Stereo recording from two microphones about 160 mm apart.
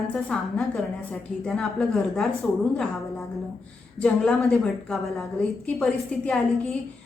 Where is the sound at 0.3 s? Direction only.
5° left (ahead or behind).